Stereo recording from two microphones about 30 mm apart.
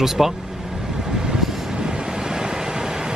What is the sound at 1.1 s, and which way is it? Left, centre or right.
Vehicle, right.